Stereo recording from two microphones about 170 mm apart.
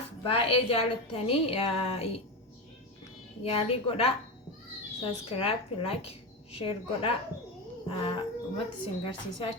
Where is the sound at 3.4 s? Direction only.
35° left (ahead or behind).